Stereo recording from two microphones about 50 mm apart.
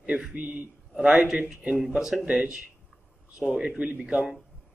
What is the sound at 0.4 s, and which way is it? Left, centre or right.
Speech, right.